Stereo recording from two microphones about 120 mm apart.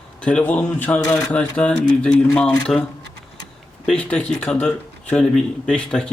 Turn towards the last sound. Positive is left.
turn(degrees=5)  # may be behind; listen again after turning